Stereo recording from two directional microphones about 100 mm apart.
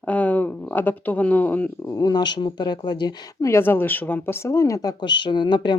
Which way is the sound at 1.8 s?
35° left (ahead or behind).